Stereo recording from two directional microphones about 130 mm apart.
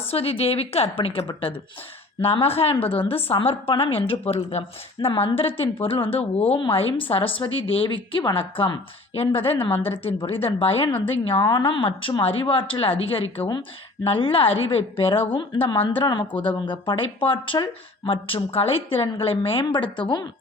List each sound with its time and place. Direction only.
0.1 s a woman's voice: 50° left (ahead or behind)
2.2 s a woman's voice: 50° left (ahead or behind)
4.9 s a woman's voice: 40° left (ahead or behind)